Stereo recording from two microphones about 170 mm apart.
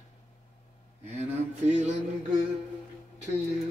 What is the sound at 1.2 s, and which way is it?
Speech, 45° right (ahead or behind).